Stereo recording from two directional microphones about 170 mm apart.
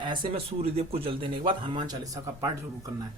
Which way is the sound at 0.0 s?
30° right (ahead or behind).